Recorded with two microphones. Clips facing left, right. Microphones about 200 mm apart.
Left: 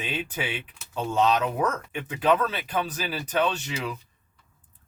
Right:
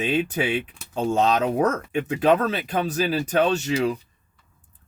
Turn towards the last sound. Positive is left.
turn(degrees=-45)  # may be behind; listen again after turning